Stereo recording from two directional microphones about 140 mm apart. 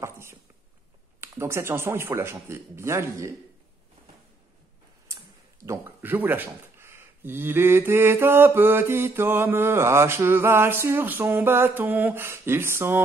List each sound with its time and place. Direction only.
0.0 s dog: 20° right (ahead or behind)
1.4 s speech: 20° right (ahead or behind)
5.7 s speech: 15° right (ahead or behind)